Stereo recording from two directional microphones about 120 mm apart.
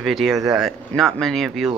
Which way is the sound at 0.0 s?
Centre (ahead or behind).